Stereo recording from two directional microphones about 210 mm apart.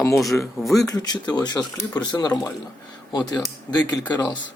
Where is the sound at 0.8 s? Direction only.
20° left (ahead or behind).